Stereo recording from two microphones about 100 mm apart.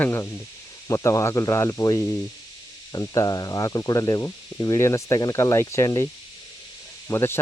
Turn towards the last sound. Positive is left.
turn(degrees=25)  # may be behind; listen again after turning